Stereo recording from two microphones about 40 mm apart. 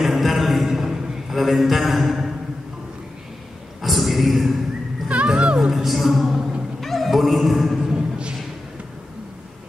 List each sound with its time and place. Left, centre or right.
0.0 s music: centre
0.7 s a sound: centre
3.8 s a sound: centre
5.0 s music: right
5.3 s music: right
5.7 s music: centre
6.8 s cat: centre
7.9 s music: right